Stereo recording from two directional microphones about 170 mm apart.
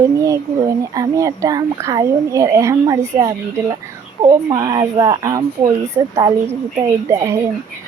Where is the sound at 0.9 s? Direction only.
20° right (ahead or behind).